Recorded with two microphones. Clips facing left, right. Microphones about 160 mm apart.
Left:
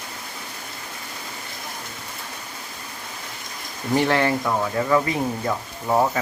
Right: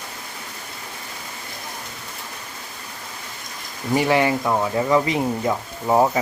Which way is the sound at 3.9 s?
10° right (ahead or behind).